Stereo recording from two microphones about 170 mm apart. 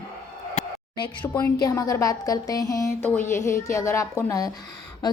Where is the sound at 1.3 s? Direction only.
25° left (ahead or behind).